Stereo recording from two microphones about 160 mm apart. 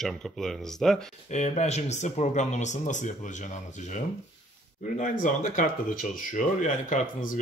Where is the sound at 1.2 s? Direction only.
45° left (ahead or behind).